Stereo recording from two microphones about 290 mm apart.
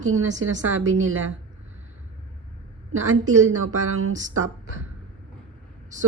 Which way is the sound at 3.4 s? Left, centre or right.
Right.